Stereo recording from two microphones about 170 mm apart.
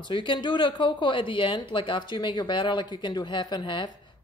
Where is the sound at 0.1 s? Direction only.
30° left (ahead or behind).